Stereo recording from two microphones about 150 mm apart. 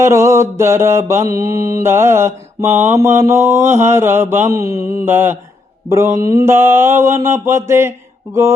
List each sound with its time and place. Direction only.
0.0 s mantra: 20° right (ahead or behind)